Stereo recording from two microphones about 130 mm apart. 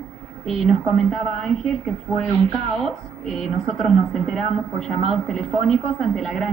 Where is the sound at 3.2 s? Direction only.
Centre (ahead or behind).